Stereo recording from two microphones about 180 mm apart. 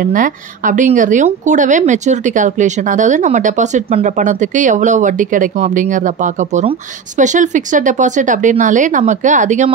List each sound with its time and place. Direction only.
0.0 s speech: 50° right (ahead or behind)